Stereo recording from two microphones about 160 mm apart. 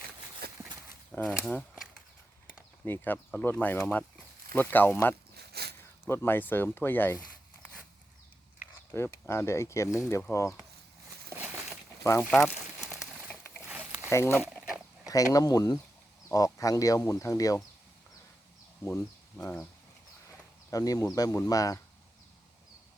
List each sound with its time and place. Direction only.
0.4 s a sound: 80° right
1.1 s speech: 5° left (ahead or behind)
2.8 s speech: 15° left (ahead or behind)
5.4 s a sound: 85° right
6.1 s speech: 15° left (ahead or behind)
8.9 s speech: 15° left (ahead or behind)
12.5 s crumpling: 5° right (ahead or behind)
13.7 s a sound: 10° right (ahead or behind)
14.1 s speech: 15° left (ahead or behind)
14.5 s a sound: 5° right (ahead or behind)
15.0 s speech: 20° left (ahead or behind)
18.8 s speech: 20° left (ahead or behind)
20.7 s speech: 20° left (ahead or behind)